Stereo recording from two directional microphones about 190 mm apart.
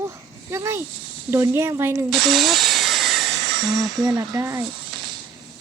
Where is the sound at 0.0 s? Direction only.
15° right (ahead or behind).